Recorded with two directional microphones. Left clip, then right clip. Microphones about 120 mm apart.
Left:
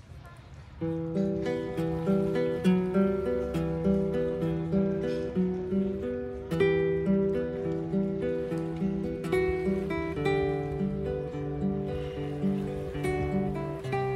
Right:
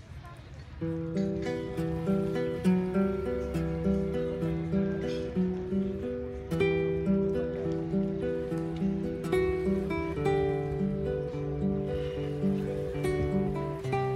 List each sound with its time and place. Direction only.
2.0 s music: 50° left (ahead or behind)
2.3 s music: 20° left (ahead or behind)
2.9 s music: 55° left (ahead or behind)
3.3 s music: 20° left (ahead or behind)
6.5 s music: 10° left (ahead or behind)
9.3 s music: centre (ahead or behind)
13.0 s music: centre (ahead or behind)